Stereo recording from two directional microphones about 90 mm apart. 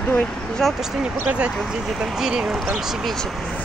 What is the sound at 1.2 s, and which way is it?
Speech, 10° right (ahead or behind).